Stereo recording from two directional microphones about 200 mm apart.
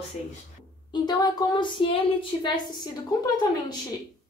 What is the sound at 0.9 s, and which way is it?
Speech, 20° left (ahead or behind).